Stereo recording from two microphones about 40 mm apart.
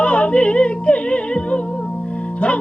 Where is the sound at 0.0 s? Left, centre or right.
Left.